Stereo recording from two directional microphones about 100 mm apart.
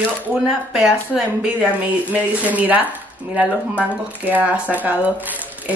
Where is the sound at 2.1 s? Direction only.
15° right (ahead or behind).